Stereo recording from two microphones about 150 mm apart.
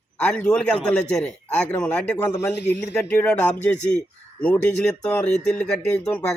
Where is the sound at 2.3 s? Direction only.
20° left (ahead or behind).